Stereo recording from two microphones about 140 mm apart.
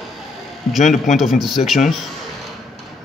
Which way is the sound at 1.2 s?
Centre (ahead or behind).